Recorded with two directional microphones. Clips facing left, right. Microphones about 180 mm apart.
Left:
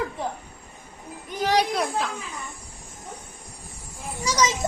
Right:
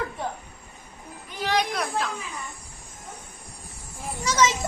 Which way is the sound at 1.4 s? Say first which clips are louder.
Left 3 dB; 40° left (ahead or behind).